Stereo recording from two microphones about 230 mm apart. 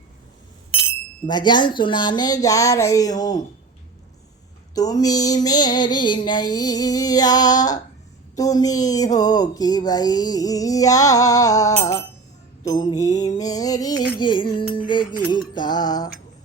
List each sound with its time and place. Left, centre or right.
1.3 s speech: centre
4.7 s speech: centre
14.2 s music: centre
14.4 s music: left
15.3 s music: centre